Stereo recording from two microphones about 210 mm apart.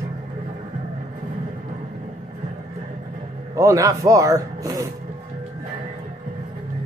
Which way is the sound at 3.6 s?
15° right (ahead or behind).